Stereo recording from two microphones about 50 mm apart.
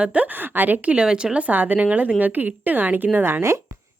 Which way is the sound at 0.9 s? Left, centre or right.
Centre.